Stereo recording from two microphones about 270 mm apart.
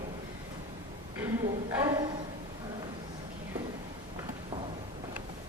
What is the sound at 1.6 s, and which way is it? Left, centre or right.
Speech, centre.